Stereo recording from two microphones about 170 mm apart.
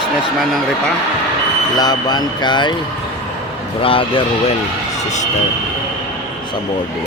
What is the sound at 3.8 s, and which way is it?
Speech, 30° left (ahead or behind).